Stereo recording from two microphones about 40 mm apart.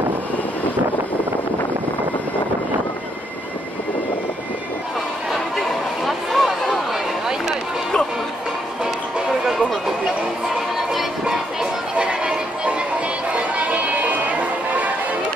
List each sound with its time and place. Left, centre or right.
5.3 s a sound: centre
12.0 s music: right
13.3 s music: right